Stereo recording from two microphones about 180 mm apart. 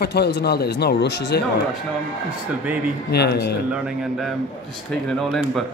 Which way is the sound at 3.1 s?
65° left (ahead or behind).